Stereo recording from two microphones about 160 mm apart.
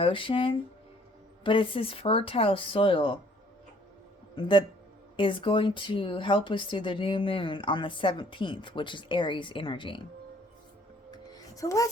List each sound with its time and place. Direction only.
0.0 s speech: 35° left (ahead or behind)
4.4 s speech: 30° left (ahead or behind)
11.1 s music: 20° left (ahead or behind)